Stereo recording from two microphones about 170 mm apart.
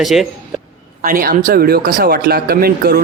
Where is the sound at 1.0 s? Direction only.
55° right (ahead or behind).